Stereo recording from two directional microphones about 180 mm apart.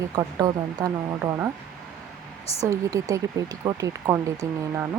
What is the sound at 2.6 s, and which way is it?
Speech, 20° right (ahead or behind).